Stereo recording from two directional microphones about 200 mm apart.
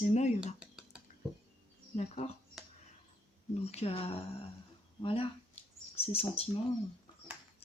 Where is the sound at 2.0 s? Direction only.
35° left (ahead or behind).